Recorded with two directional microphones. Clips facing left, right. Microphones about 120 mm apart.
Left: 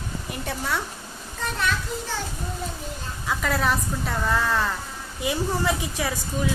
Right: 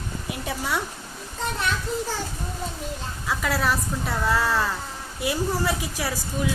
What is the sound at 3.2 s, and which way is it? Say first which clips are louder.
A woman's voice: left 1 dB; centre (ahead or behind).